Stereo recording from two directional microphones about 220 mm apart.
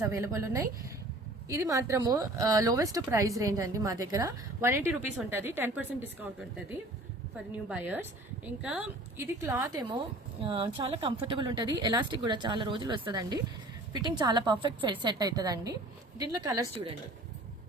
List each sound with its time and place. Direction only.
0.0 s speech: 15° right (ahead or behind)
7.3 s speech: 5° right (ahead or behind)